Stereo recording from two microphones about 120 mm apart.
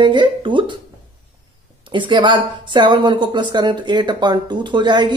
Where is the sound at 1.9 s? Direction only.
40° right (ahead or behind).